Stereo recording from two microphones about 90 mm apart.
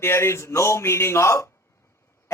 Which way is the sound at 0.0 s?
30° left (ahead or behind).